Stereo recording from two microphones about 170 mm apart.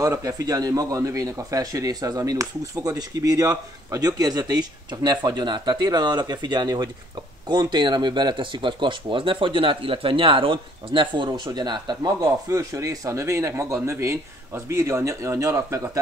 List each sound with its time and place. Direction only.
0.0 s speech: 20° right (ahead or behind)